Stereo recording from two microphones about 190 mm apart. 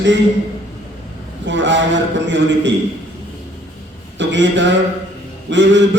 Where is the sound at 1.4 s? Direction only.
70° right (ahead or behind).